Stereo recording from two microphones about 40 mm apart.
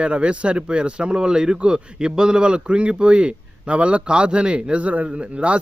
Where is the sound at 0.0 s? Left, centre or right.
Right.